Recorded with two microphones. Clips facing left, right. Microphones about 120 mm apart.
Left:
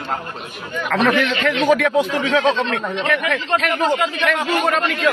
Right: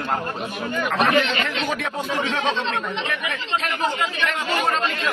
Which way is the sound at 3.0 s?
75° left (ahead or behind).